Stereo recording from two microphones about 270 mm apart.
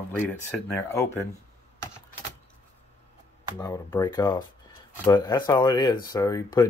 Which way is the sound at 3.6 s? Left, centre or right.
Centre.